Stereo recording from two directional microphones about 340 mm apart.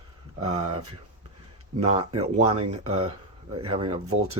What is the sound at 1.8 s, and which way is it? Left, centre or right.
Speech, centre.